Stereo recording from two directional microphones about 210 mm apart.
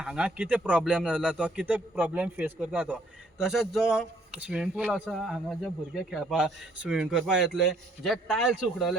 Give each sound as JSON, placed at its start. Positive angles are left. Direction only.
{"t": 0.0, "sound": "speech", "side_deg": -5}